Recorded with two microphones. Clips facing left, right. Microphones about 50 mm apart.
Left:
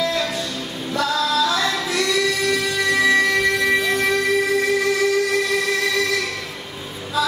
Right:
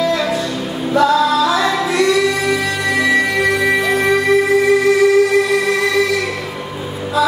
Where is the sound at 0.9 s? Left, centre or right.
Centre.